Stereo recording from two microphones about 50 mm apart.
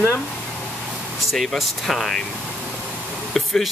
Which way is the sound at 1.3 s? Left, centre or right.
Centre.